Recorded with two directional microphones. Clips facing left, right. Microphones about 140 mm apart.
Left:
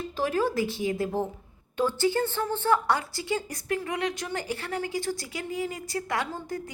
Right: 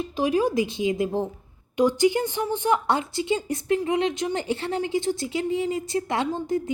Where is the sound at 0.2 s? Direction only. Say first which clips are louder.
Right 4 dB; 15° right (ahead or behind).